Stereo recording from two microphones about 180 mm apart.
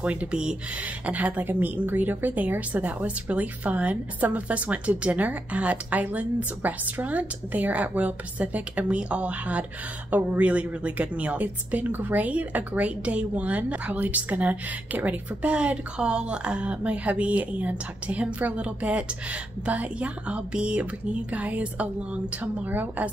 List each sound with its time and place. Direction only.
0.0 s a woman's voice: 5° right (ahead or behind)